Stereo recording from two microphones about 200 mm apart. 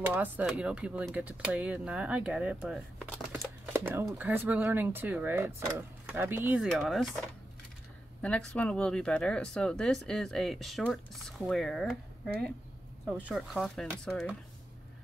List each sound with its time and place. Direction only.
0.0 s speech: 10° right (ahead or behind)
3.7 s speech: 10° right (ahead or behind)
8.2 s speech: 5° left (ahead or behind)